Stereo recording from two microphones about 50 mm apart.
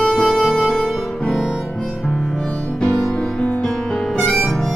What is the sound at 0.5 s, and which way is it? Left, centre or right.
Music, centre.